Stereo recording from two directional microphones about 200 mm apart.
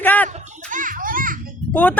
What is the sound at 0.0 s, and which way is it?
Music, 10° left (ahead or behind).